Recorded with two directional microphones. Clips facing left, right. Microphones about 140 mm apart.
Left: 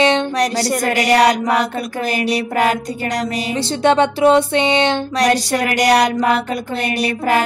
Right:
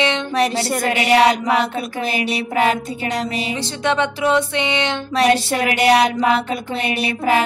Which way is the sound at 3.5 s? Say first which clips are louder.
Left 7 dB; 35° left (ahead or behind).